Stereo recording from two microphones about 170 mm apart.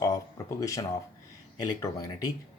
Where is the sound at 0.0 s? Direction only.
20° left (ahead or behind).